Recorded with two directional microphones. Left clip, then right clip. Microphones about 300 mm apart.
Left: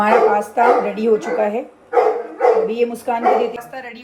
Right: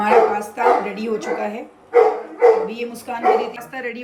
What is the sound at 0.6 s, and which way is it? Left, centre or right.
Speech, centre.